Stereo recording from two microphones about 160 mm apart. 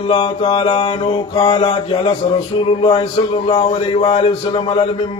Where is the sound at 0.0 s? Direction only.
35° left (ahead or behind).